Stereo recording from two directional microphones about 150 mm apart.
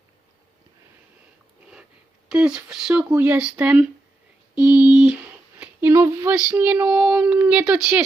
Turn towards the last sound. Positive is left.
turn(degrees=-5)  # may be behind; listen again after turning